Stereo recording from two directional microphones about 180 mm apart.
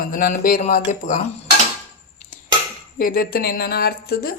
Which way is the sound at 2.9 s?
55° left (ahead or behind).